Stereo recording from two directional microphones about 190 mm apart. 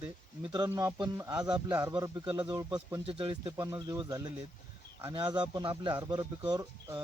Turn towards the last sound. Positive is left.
turn(degrees=-20)  # may be behind; listen again after turning